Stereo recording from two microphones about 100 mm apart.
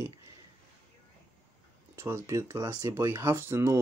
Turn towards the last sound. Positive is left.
turn(degrees=-25)  # may be behind; listen again after turning